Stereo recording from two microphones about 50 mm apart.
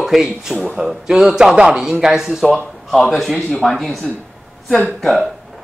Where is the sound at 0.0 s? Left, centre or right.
Centre.